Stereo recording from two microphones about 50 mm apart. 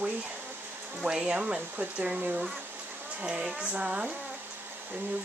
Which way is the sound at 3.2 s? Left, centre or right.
Centre.